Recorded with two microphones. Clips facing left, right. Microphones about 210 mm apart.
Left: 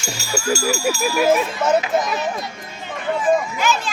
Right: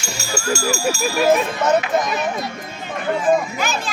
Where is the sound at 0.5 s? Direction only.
5° left (ahead or behind).